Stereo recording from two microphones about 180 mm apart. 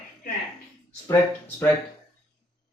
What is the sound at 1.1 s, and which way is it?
Speech, 10° left (ahead or behind).